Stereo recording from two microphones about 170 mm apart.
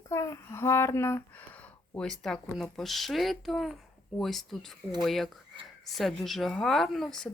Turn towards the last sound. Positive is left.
turn(degrees=5)  # may be behind; listen again after turning